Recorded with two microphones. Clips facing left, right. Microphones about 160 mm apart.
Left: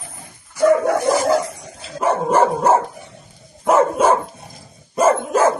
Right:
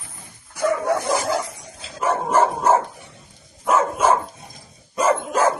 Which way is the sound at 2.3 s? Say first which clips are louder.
Left 2 dB; 40° left (ahead or behind).